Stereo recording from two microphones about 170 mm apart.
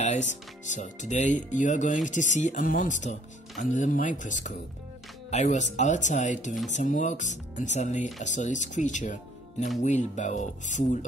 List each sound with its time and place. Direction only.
0.0 s speech: 45° left (ahead or behind)